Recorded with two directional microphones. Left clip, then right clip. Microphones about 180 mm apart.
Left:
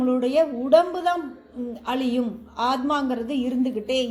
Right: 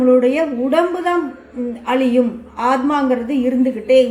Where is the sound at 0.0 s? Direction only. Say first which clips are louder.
Right 8 dB; 45° left (ahead or behind).